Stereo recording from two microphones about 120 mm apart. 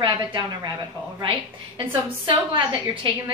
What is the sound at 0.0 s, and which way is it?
Speech, 40° right (ahead or behind).